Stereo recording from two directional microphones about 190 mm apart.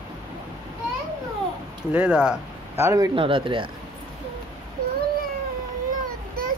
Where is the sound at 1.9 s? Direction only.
5° right (ahead or behind).